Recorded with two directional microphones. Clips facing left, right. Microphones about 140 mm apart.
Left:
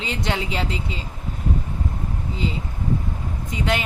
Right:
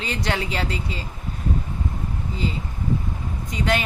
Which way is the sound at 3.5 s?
20° left (ahead or behind).